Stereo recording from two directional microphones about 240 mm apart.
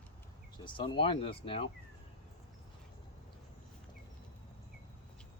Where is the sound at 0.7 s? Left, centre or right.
Left.